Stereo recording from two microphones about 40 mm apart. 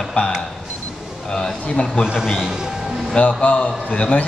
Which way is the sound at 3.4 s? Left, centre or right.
Left.